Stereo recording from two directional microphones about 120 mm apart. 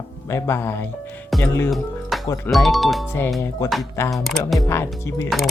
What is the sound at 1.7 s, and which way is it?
Music, centre (ahead or behind).